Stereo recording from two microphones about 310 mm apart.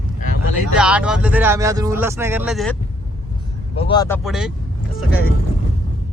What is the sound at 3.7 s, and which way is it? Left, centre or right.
Speech, centre.